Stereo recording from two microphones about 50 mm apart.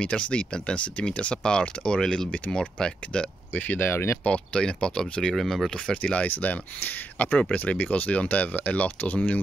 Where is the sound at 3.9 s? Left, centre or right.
Left.